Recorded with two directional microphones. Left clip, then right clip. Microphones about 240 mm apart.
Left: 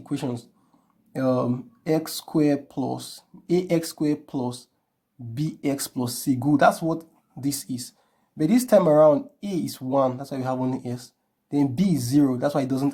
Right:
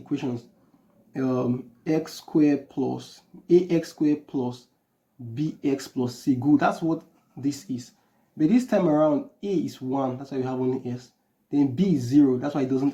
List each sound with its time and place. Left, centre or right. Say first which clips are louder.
0.0 s speech: even; left